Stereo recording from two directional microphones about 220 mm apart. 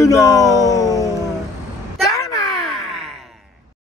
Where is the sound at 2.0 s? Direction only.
15° left (ahead or behind).